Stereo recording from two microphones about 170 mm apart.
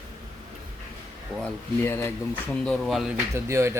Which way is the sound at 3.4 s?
15° right (ahead or behind).